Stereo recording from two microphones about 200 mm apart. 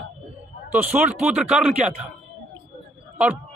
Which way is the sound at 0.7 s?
5° right (ahead or behind).